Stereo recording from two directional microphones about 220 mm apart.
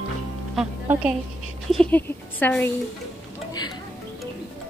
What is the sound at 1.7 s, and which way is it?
Speech, 5° left (ahead or behind).